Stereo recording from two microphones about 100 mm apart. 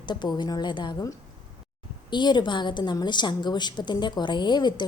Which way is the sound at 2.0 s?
50° left (ahead or behind).